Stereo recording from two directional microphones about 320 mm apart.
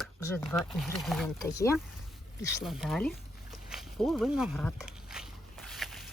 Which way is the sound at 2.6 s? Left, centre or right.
Centre.